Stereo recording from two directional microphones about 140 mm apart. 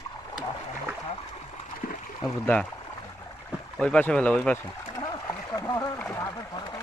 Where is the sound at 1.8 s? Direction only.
90° left.